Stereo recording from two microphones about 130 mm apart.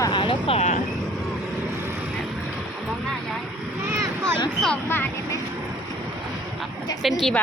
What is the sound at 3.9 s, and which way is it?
Vehicle, 20° right (ahead or behind).